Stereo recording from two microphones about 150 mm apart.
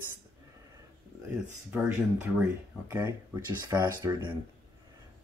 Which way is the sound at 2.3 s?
10° right (ahead or behind).